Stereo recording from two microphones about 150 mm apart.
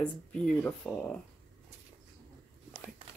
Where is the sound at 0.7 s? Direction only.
10° left (ahead or behind).